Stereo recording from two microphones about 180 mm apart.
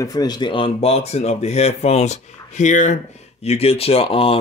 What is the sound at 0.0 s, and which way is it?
A man's voice, 20° left (ahead or behind).